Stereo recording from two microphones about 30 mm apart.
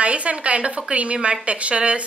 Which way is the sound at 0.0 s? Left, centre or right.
Right.